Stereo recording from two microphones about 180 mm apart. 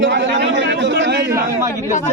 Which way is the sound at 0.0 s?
80° right.